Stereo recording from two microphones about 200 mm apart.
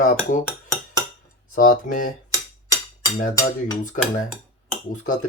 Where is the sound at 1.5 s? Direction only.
40° left (ahead or behind).